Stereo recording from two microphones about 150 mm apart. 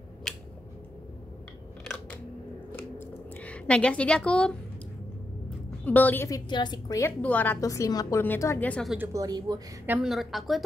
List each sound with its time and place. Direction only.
0.3 s a sound: 5° left (ahead or behind)
2.7 s a sound: 10° left (ahead or behind)
5.9 s a woman's voice: 10° left (ahead or behind)
7.6 s a woman's voice: 20° left (ahead or behind)
8.9 s speech: 15° right (ahead or behind)
9.2 s speech: 25° right (ahead or behind)
10.0 s a woman's voice: centre (ahead or behind)